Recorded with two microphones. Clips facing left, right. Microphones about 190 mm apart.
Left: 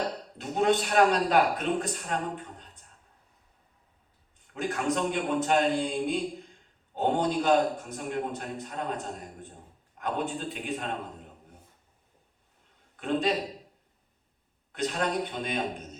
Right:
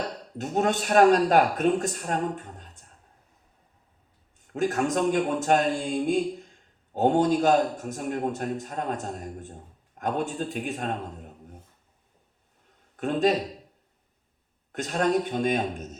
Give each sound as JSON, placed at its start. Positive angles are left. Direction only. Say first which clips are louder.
{"t": 0.3, "sound": "a man's voice", "louder": "even", "side_deg": -45}
{"t": 4.5, "sound": "a man's voice", "louder": "right 4 dB", "side_deg": -45}
{"t": 13.0, "sound": "a man's voice", "louder": "right 4 dB", "side_deg": -45}
{"t": 14.7, "sound": "a man's voice", "louder": "right 5 dB", "side_deg": -45}